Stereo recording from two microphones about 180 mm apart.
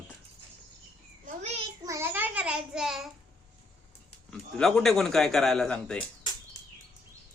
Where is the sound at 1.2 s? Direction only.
35° right (ahead or behind).